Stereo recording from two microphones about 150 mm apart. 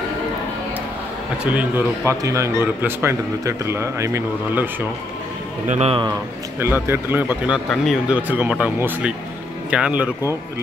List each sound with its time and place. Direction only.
1.4 s speech: 10° right (ahead or behind)
2.0 s speech: 20° right (ahead or behind)
5.7 s a man's voice: 45° right (ahead or behind)
6.6 s speech: 15° right (ahead or behind)
8.2 s speech: 10° right (ahead or behind)